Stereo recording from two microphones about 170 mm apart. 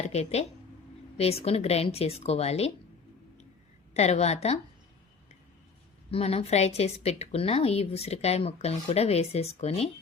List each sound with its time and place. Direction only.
0.1 s a woman's voice: 40° left (ahead or behind)
3.9 s a woman's voice: 40° left (ahead or behind)
6.1 s a woman's voice: 35° left (ahead or behind)